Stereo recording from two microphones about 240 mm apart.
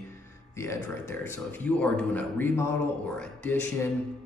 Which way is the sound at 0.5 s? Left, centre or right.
Centre.